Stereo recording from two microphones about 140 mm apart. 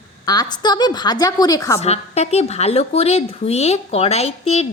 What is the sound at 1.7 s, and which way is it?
A woman's voice, 50° left (ahead or behind).